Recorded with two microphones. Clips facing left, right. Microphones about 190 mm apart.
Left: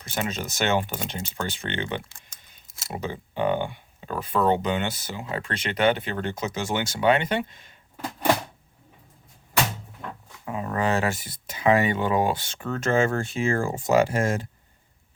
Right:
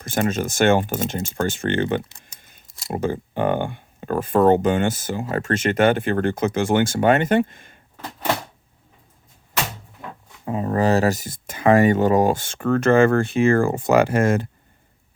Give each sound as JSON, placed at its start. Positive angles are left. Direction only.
{"t": 0.0, "sound": "speech", "side_deg": -50}
{"t": 2.0, "sound": "typing", "side_deg": -20}
{"t": 2.9, "sound": "speech", "side_deg": -50}
{"t": 10.4, "sound": "speech", "side_deg": -35}